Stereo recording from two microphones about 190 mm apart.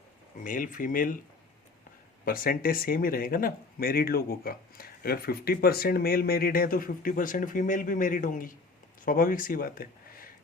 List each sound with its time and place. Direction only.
0.4 s speech: 45° left (ahead or behind)
2.2 s speech: 50° left (ahead or behind)